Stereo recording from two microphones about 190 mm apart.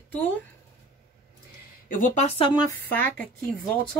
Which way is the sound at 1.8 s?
45° left (ahead or behind).